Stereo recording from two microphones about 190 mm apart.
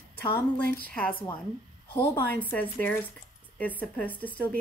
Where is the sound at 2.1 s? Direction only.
10° left (ahead or behind).